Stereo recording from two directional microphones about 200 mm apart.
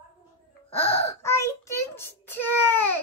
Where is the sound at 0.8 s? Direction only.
10° left (ahead or behind).